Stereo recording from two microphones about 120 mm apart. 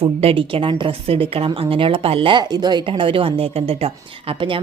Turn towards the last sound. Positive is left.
turn(degrees=-50)  # may be behind; listen again after turning